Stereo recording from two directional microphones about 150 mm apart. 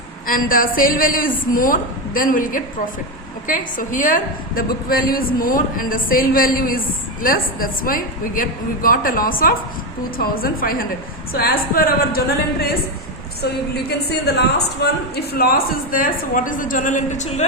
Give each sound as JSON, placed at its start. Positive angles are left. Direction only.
{"t": 0.3, "sound": "a woman's voice", "side_deg": 70}
{"t": 14.1, "sound": "a woman's voice", "side_deg": 90}